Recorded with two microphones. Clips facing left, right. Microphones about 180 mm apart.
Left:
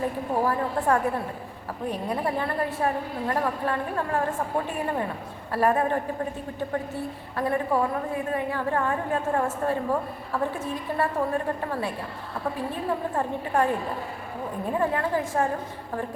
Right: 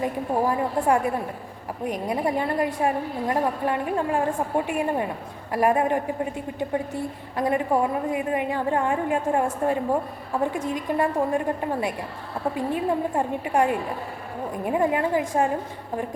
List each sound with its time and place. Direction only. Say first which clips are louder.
0.0 s a woman's voice: right 2 dB; 15° right (ahead or behind)
7.3 s a woman's voice: right 2 dB; 15° right (ahead or behind)